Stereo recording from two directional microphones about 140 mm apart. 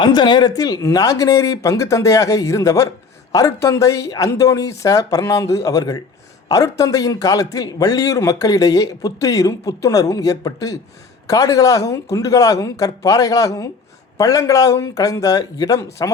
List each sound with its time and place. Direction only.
0.0 s a man's voice: 30° left (ahead or behind)